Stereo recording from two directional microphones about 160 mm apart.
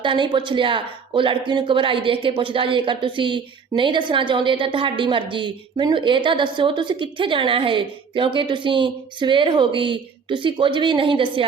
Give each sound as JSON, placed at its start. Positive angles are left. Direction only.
{"t": 0.0, "sound": "speech", "side_deg": -30}